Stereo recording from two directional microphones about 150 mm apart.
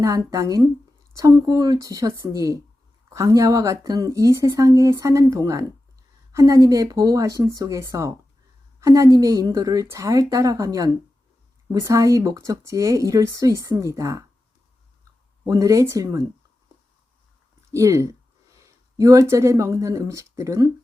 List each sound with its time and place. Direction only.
0.0 s a woman's voice: 20° right (ahead or behind)
15.4 s a woman's voice: 20° right (ahead or behind)
17.7 s a woman's voice: 20° right (ahead or behind)